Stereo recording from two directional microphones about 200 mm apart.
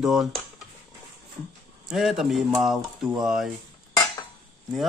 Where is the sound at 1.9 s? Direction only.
Centre (ahead or behind).